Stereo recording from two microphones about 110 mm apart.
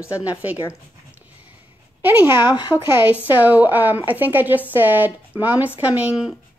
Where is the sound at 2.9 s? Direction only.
15° right (ahead or behind).